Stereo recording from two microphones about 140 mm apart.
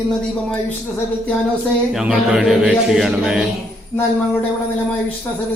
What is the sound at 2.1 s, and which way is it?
A man's voice, 5° right (ahead or behind).